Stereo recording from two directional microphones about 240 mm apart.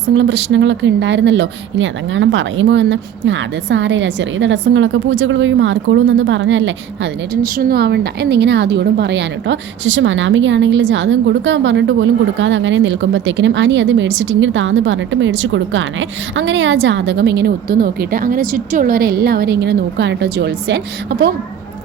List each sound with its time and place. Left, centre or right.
0.0 s a woman's voice: right
7.4 s a woman's voice: right